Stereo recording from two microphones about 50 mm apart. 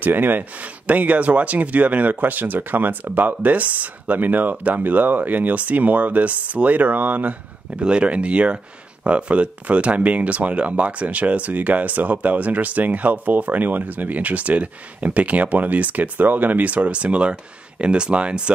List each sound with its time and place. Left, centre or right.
0.0 s speech: right
7.8 s speech: right